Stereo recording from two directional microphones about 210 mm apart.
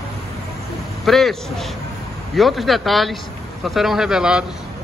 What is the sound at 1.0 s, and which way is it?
Speech, centre (ahead or behind).